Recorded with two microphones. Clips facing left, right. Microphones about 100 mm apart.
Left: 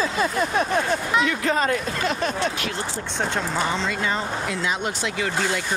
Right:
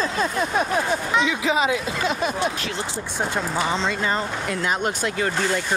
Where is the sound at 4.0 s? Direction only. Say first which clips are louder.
Right 1 dB; 45° right (ahead or behind).